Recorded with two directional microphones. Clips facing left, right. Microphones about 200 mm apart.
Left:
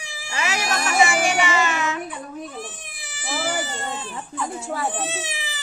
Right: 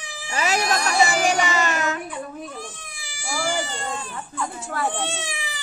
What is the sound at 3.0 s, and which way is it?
Baby cry, centre (ahead or behind).